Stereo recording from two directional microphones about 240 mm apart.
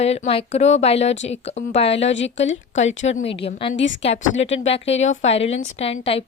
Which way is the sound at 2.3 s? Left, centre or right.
Left.